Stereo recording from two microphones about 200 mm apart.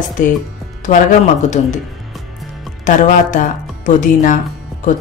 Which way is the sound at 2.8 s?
40° left (ahead or behind).